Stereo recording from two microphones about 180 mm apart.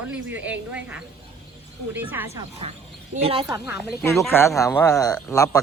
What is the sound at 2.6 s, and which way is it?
Speech, 35° right (ahead or behind).